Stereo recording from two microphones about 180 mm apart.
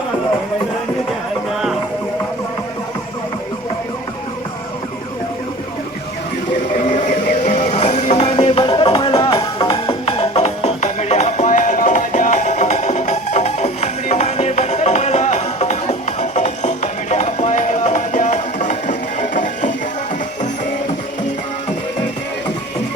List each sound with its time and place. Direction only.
6.8 s music: 40° left (ahead or behind)